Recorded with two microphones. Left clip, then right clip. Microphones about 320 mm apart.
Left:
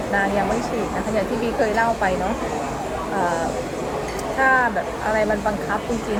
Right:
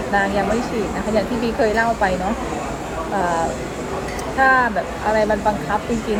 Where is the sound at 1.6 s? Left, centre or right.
Centre.